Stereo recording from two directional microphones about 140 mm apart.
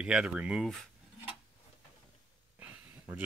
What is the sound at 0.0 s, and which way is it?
Speech, 5° right (ahead or behind).